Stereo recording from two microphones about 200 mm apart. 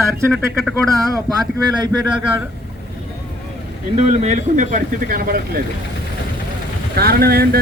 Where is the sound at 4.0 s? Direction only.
35° right (ahead or behind).